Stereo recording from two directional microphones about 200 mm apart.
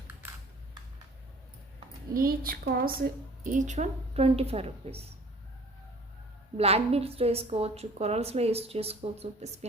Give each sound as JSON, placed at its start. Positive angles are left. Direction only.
{"t": 2.1, "sound": "a woman's voice", "side_deg": -45}
{"t": 6.6, "sound": "a woman's voice", "side_deg": -30}